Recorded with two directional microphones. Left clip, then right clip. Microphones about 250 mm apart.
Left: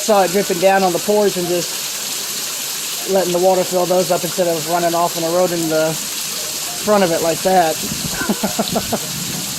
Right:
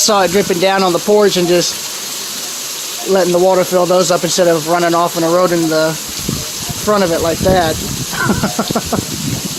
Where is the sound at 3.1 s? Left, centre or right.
Centre.